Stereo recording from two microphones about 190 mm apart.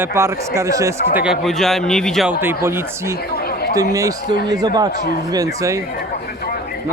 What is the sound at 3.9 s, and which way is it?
Speech, 20° right (ahead or behind).